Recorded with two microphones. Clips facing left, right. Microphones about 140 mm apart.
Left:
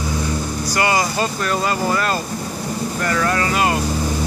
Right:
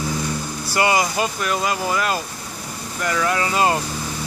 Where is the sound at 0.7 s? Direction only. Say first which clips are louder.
Right 1 dB; 20° right (ahead or behind).